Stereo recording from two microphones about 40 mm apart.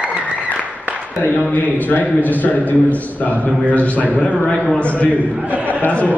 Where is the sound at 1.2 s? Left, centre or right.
Left.